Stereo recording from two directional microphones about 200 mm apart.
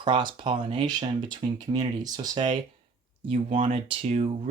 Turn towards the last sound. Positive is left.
turn(degrees=-30)  # may be behind; listen again after turning